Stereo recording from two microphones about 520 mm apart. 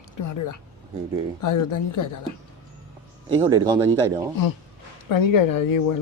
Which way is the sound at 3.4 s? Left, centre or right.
Centre.